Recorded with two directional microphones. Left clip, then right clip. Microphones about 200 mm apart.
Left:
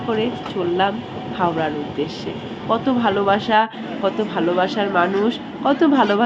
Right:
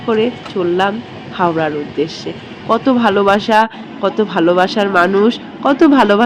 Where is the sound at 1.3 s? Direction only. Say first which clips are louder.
Right 6 dB; 25° right (ahead or behind).